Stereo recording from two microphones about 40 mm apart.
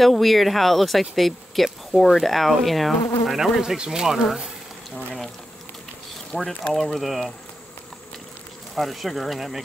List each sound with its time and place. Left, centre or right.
0.0 s speech: centre
3.6 s speech: centre
6.3 s speech: centre
6.7 s speech: centre
8.7 s speech: centre